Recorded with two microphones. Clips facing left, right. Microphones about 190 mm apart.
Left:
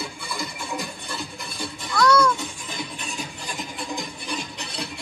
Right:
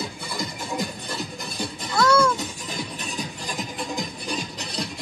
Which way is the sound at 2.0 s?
25° right (ahead or behind).